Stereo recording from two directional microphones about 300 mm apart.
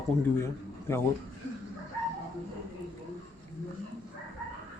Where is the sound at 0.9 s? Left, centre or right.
Centre.